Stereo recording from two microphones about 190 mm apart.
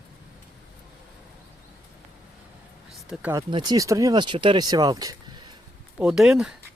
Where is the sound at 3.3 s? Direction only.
25° right (ahead or behind).